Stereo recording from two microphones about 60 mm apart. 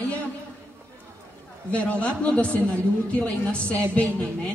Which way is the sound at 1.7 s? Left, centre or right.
Left.